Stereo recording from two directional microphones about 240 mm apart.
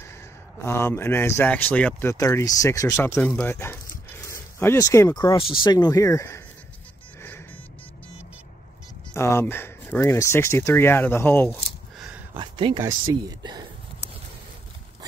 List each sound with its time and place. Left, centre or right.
0.6 s speech: centre
7.2 s music: centre
9.1 s speech: centre
12.4 s speech: centre